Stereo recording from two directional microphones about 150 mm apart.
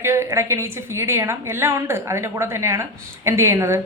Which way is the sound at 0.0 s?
15° right (ahead or behind).